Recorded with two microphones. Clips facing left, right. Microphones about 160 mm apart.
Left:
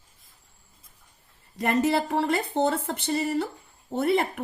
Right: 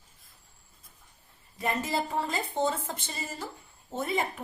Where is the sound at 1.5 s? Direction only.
80° left.